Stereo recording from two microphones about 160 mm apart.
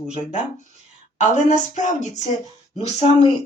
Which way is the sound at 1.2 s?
50° left (ahead or behind).